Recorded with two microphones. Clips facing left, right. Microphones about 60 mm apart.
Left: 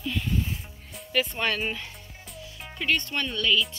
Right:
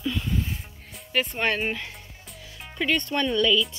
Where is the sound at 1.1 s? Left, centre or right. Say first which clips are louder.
Right 1 dB; right.